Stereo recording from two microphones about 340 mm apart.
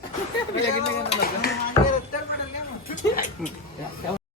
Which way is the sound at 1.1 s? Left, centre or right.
Left.